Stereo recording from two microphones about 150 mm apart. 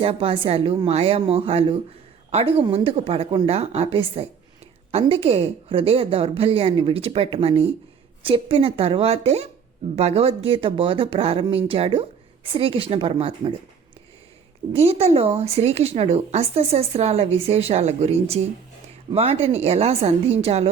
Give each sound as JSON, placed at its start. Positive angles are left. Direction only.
{"t": 0.0, "sound": "a woman's voice", "side_deg": -40}
{"t": 14.7, "sound": "speech", "side_deg": -40}